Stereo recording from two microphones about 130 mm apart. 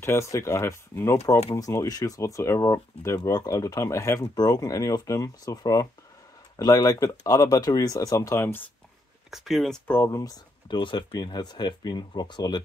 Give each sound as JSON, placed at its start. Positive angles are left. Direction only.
{"t": 0.0, "sound": "speech", "side_deg": 20}
{"t": 9.3, "sound": "speech", "side_deg": 0}
{"t": 9.8, "sound": "speech", "side_deg": 20}